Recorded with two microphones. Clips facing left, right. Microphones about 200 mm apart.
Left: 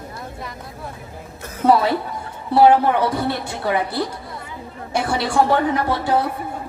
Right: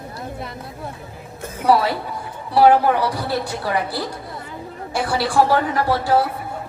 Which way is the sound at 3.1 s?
25° left (ahead or behind).